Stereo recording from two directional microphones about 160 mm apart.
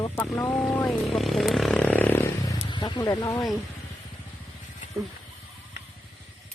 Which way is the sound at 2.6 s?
30° left (ahead or behind).